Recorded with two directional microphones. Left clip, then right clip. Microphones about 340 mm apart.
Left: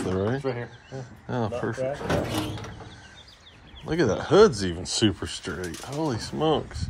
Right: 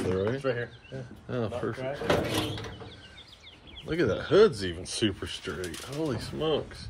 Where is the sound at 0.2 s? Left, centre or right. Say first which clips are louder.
Left 1 dB; centre.